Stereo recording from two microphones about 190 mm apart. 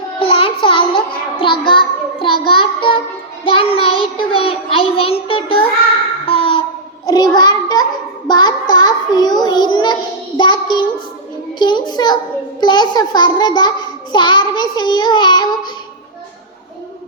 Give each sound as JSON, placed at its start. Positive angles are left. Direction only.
{"t": 0.2, "sound": "music", "side_deg": 30}
{"t": 1.4, "sound": "a child's voice", "side_deg": 25}
{"t": 6.2, "sound": "a sound", "side_deg": 30}
{"t": 8.3, "sound": "child singing", "side_deg": 20}
{"t": 11.6, "sound": "a child's voice", "side_deg": 20}